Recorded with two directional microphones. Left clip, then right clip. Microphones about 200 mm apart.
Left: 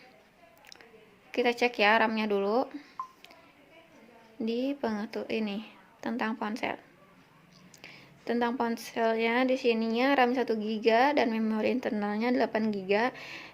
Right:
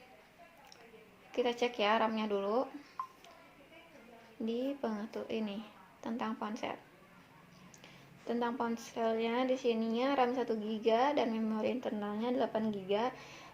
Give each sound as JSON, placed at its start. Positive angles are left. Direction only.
{"t": 1.3, "sound": "speech", "side_deg": 35}
{"t": 4.4, "sound": "speech", "side_deg": 35}
{"t": 7.8, "sound": "speech", "side_deg": 35}